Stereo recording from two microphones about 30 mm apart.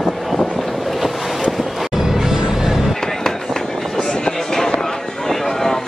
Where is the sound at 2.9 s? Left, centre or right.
Centre.